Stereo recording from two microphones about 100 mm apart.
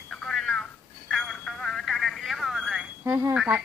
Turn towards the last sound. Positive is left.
turn(degrees=-10)  # may be behind; listen again after turning